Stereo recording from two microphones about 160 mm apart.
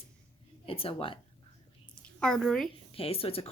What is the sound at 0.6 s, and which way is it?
Speech, 35° left (ahead or behind).